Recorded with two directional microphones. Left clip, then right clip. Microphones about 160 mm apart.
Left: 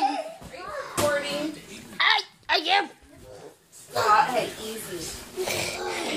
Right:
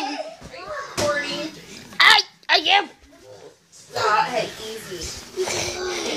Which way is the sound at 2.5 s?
Centre (ahead or behind).